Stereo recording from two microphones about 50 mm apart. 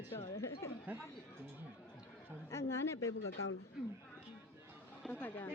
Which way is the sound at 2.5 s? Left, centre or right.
Left.